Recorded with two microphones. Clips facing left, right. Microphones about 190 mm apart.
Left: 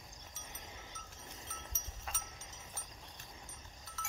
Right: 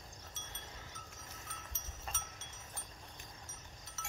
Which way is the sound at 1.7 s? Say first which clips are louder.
Right 2 dB; 5° left (ahead or behind).